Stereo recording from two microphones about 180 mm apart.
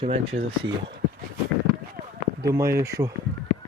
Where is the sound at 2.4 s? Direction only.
15° right (ahead or behind).